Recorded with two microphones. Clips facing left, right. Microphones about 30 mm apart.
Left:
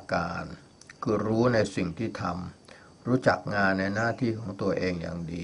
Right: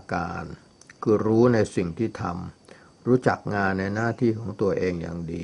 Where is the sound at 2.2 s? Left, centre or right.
Left.